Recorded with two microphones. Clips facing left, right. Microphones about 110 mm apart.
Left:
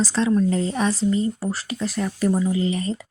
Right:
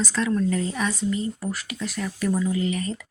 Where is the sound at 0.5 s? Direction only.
30° left (ahead or behind).